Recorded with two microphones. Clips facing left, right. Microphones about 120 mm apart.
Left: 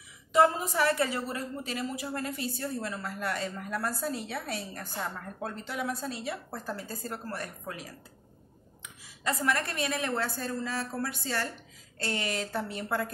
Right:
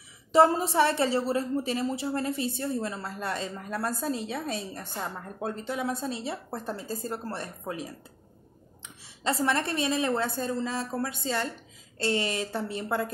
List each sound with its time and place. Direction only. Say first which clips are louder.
0.3 s a woman's voice: right 3 dB; 30° right (ahead or behind)